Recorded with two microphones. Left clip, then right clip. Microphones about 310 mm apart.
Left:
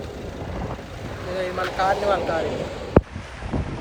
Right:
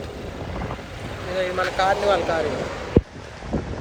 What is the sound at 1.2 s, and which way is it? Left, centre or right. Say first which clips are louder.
Speech: right 3 dB; centre.